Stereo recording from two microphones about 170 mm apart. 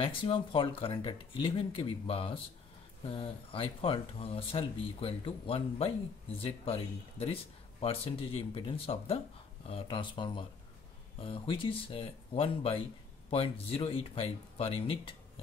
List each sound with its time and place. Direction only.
0.0 s speech: 30° left (ahead or behind)